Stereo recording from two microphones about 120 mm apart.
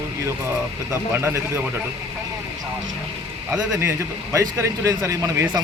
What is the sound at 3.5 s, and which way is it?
Speech, 5° right (ahead or behind).